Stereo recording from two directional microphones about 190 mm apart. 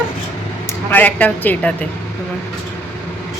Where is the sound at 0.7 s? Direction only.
10° left (ahead or behind).